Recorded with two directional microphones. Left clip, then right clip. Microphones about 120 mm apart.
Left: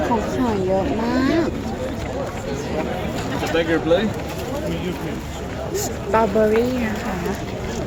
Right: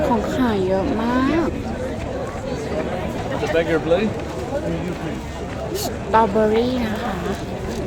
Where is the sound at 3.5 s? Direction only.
15° left (ahead or behind).